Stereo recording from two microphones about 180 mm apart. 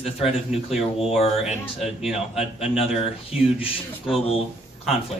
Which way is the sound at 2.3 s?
35° left (ahead or behind).